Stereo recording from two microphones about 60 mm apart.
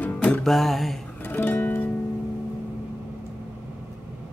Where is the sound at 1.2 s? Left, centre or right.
Left.